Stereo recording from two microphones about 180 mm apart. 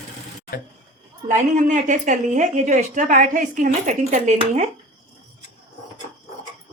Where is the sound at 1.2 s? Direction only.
45° right (ahead or behind).